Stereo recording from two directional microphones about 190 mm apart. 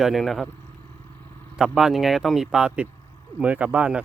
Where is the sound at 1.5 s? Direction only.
5° right (ahead or behind).